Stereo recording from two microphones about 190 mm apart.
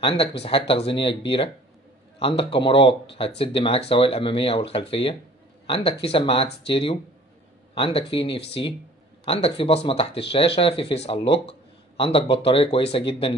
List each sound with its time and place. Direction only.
0.4 s speech: 30° left (ahead or behind)
8.4 s speech: 60° left (ahead or behind)
9.2 s speech: 30° left (ahead or behind)